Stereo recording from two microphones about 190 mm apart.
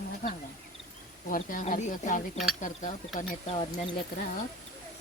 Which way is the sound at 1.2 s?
45° left (ahead or behind).